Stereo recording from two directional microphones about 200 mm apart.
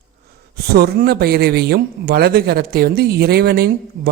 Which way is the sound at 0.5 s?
50° right (ahead or behind).